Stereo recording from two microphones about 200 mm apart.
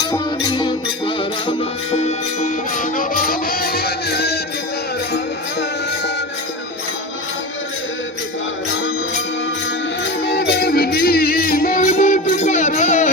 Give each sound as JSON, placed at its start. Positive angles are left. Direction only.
{"t": 0.0, "sound": "music", "side_deg": 20}
{"t": 10.2, "sound": "music", "side_deg": 55}